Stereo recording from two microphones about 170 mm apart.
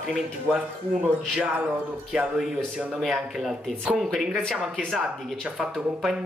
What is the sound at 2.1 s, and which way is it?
Speech, centre (ahead or behind).